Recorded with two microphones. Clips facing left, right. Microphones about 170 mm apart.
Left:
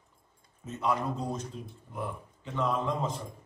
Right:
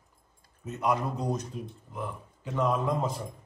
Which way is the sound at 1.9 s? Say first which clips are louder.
Left 1 dB; 5° right (ahead or behind).